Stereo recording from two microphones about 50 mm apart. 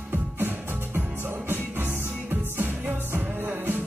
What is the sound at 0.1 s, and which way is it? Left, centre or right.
Music, right.